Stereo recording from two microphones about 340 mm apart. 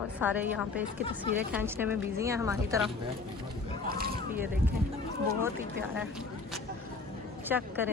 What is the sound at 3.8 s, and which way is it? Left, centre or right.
Boat, right.